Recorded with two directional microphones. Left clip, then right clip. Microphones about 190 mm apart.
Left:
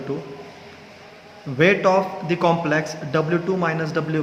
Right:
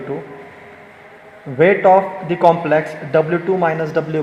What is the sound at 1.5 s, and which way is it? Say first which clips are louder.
A man's voice: right 6 dB; 10° right (ahead or behind).